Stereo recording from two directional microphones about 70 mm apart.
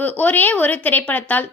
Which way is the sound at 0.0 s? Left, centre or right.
Left.